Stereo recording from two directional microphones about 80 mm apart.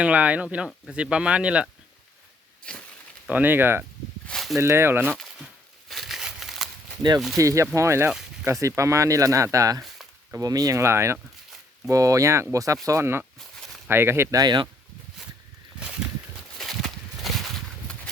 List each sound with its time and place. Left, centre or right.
0.0 s speech: centre
3.2 s speech: right
4.3 s a sound: centre
4.6 s speech: right
5.9 s crumpling: centre
7.3 s speech: right
14.3 s speech: right
16.6 s a sound: centre